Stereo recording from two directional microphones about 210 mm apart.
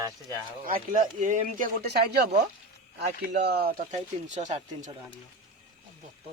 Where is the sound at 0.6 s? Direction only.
40° right (ahead or behind).